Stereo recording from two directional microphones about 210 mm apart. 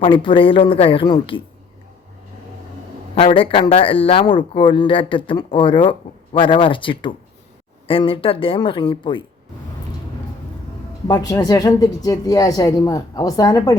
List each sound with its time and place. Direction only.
0.0 s speech: 25° left (ahead or behind)
3.2 s speech: 25° left (ahead or behind)
11.1 s speech: 15° left (ahead or behind)